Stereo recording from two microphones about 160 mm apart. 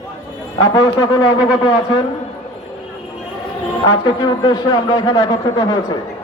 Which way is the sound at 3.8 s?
30° left (ahead or behind).